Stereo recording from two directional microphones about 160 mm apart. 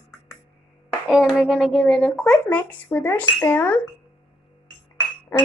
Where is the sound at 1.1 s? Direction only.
5° right (ahead or behind); by 3.8 s 10° left (ahead or behind).